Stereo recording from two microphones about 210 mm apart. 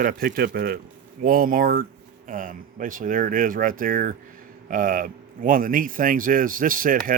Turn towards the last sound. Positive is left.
turn(degrees=-40)  # may be behind; listen again after turning